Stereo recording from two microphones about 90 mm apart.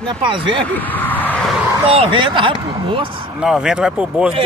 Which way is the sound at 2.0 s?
70° right (ahead or behind).